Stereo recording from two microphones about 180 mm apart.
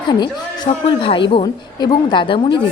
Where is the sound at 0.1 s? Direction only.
25° left (ahead or behind).